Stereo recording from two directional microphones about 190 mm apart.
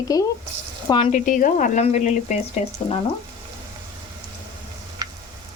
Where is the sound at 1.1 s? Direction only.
45° left (ahead or behind).